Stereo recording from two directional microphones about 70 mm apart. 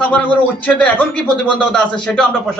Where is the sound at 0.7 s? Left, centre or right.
Centre.